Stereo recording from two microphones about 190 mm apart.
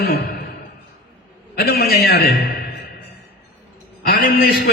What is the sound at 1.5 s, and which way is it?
Speech, 55° left (ahead or behind).